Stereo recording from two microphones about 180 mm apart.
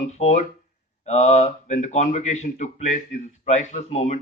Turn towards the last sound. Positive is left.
turn(degrees=40)  # may be behind; listen again after turning